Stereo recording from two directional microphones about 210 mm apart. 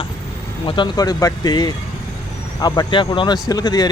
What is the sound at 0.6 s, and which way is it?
Speech, 25° left (ahead or behind).